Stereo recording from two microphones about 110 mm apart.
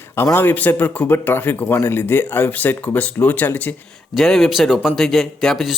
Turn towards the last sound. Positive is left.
turn(degrees=0)  # may be behind; listen again after turning